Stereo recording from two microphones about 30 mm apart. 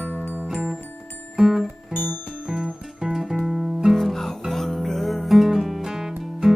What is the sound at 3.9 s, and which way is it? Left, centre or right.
Music, centre.